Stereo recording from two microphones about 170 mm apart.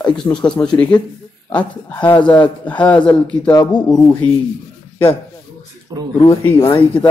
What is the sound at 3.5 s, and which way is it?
Speech, 25° left (ahead or behind).